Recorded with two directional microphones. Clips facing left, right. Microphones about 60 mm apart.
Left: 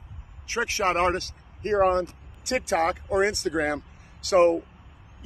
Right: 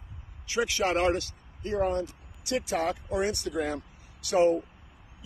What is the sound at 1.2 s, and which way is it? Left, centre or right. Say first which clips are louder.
Speech: left 6 dB; left.